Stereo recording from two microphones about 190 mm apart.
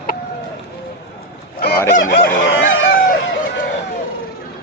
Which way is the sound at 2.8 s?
50° left (ahead or behind).